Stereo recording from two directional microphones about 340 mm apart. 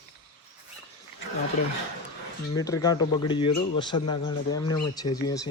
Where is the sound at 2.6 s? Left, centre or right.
Centre.